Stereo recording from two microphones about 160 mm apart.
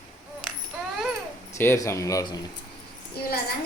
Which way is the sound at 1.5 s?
15° left (ahead or behind).